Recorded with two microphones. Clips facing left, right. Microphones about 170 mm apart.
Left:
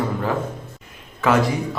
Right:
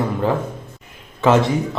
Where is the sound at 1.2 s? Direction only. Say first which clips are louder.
Right 3 dB; 25° right (ahead or behind).